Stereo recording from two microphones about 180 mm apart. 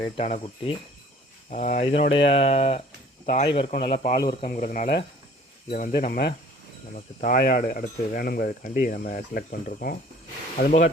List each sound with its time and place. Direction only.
0.0 s speech: 30° left (ahead or behind)
1.5 s speech: 45° left (ahead or behind); by 4.4 s 25° left (ahead or behind)
4.4 s speech: 45° left (ahead or behind)